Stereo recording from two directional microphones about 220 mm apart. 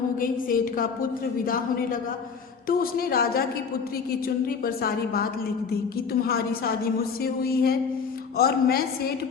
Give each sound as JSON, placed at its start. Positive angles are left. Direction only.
{"t": 0.2, "sound": "a woman's voice", "side_deg": 40}